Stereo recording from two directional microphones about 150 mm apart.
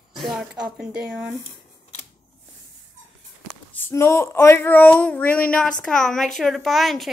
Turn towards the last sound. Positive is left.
turn(degrees=0)  # may be behind; listen again after turning